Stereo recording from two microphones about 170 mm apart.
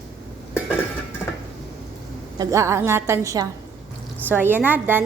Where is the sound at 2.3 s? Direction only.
15° right (ahead or behind).